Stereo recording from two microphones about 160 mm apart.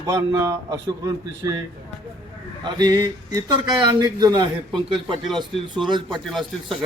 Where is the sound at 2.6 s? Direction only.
25° right (ahead or behind).